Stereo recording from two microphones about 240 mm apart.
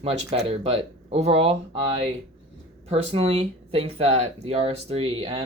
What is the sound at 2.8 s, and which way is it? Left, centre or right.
Speech, right.